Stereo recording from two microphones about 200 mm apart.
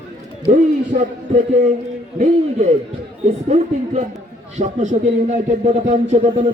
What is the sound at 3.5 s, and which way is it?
A man's voice, 35° right (ahead or behind).